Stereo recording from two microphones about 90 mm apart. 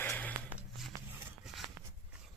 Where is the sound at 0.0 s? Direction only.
20° left (ahead or behind).